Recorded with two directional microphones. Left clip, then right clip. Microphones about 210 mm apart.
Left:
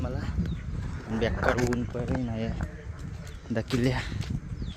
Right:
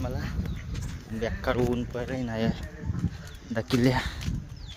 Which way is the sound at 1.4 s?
Centre (ahead or behind).